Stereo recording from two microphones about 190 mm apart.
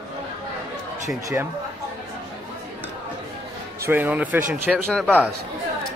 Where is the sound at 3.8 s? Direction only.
10° right (ahead or behind); by 5.3 s 5° left (ahead or behind).